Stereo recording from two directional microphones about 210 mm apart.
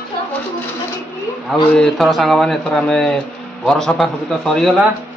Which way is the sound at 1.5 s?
Centre (ahead or behind).